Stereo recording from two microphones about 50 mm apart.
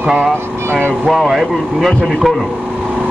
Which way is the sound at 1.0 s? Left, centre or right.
Centre.